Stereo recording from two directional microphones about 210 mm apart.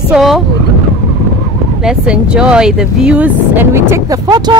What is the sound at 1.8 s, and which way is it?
Speech, 5° right (ahead or behind).